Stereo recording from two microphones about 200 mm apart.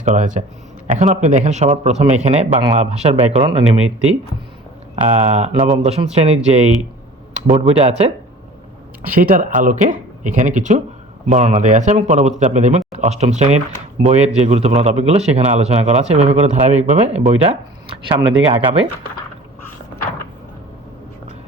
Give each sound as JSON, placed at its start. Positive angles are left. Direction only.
{"t": 0.0, "sound": "speech", "side_deg": -35}
{"t": 5.1, "sound": "speech", "side_deg": -35}
{"t": 7.7, "sound": "speech", "side_deg": -30}
{"t": 9.0, "sound": "speech", "side_deg": -45}